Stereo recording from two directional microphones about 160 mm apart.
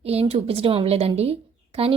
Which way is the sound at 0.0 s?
40° right (ahead or behind).